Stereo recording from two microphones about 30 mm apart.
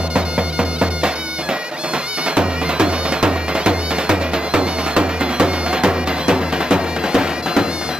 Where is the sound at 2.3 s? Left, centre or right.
Right.